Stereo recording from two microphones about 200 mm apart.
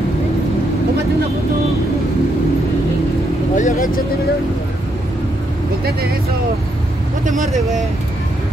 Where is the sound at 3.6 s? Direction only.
40° left (ahead or behind).